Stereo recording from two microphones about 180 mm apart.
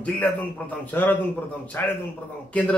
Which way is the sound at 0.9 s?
10° left (ahead or behind).